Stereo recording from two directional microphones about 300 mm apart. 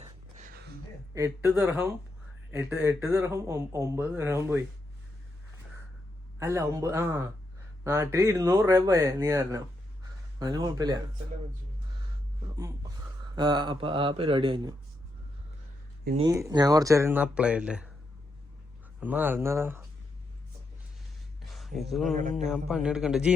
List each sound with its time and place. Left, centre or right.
0.3 s a sound: right
1.1 s speech: centre
6.4 s speech: centre
13.3 s speech: centre
16.2 s speech: centre
18.9 s speech: centre
21.4 s a sound: centre
22.1 s speech: right
22.4 s a man's voice: centre